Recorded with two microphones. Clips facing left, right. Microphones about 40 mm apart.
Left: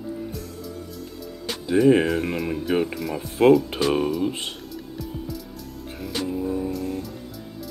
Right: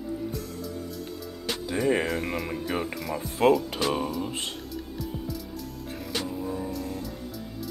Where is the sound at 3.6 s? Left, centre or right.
Left.